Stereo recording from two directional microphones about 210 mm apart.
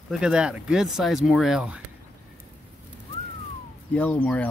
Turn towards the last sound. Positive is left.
turn(degrees=5)  # may be behind; listen again after turning